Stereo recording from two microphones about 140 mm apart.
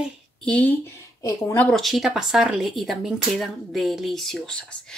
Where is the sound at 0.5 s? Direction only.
10° left (ahead or behind).